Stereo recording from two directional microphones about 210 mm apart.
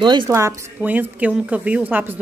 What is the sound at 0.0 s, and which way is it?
Speech, 20° right (ahead or behind).